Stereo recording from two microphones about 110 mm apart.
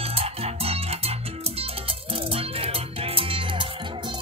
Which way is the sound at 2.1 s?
60° right (ahead or behind).